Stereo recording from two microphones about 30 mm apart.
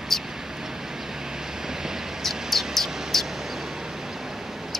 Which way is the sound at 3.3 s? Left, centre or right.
Centre.